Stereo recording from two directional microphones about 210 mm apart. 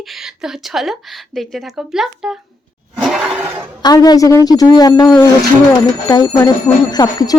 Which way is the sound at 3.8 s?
20° left (ahead or behind).